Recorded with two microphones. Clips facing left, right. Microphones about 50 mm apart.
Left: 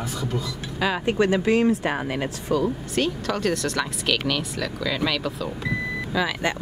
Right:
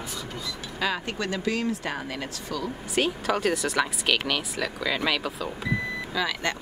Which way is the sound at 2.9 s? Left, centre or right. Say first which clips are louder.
Right 2 dB; centre.